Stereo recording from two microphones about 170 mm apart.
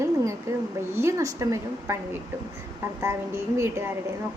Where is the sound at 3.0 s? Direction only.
15° right (ahead or behind).